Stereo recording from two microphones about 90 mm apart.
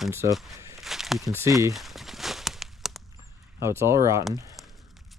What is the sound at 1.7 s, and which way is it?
Walk, centre (ahead or behind).